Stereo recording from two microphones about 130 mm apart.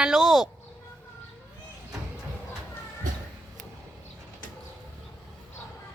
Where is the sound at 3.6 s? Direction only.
75° right (ahead or behind).